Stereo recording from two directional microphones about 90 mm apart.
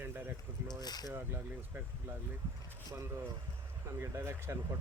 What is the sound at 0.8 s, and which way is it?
Speech, 50° left (ahead or behind).